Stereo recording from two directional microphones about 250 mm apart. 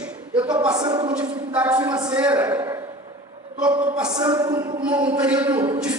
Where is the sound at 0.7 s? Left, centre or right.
Centre.